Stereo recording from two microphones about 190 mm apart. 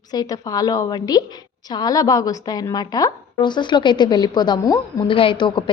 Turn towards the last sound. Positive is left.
turn(degrees=25)  # may be behind; listen again after turning